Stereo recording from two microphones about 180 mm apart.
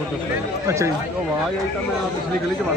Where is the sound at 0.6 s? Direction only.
15° right (ahead or behind).